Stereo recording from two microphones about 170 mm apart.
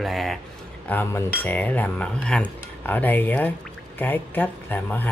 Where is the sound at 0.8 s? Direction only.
10° left (ahead or behind).